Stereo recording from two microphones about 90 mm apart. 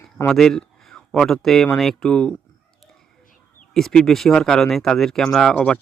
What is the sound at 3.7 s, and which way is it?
Speech, 5° left (ahead or behind).